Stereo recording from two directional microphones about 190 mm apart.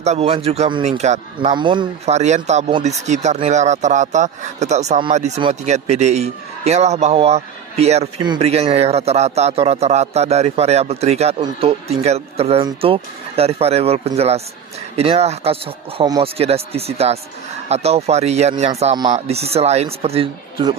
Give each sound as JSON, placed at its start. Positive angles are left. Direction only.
{"t": 0.0, "sound": "a man's voice", "side_deg": -35}
{"t": 1.5, "sound": "speech", "side_deg": -25}
{"t": 2.1, "sound": "a man's voice", "side_deg": -35}